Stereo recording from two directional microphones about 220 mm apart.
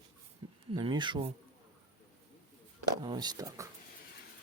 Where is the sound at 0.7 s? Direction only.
20° right (ahead or behind).